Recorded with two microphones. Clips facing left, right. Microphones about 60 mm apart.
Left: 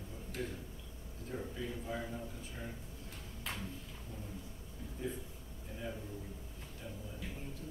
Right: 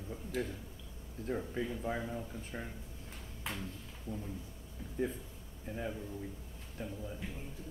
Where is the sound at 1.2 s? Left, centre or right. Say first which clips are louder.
Right 5 dB; right.